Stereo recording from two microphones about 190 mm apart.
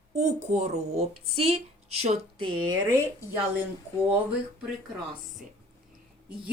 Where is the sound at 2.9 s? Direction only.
10° right (ahead or behind).